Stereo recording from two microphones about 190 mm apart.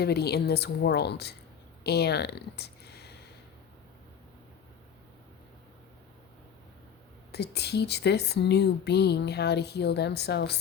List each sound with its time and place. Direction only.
0.0 s speech: 60° left (ahead or behind)
7.3 s speech: 60° left (ahead or behind)